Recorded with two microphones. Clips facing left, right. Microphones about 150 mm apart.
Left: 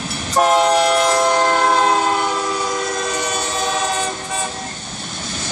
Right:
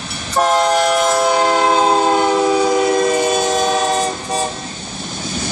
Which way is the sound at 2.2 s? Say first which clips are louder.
Right 7 dB; 55° right (ahead or behind).